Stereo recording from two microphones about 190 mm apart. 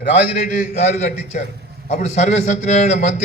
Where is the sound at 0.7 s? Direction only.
40° left (ahead or behind).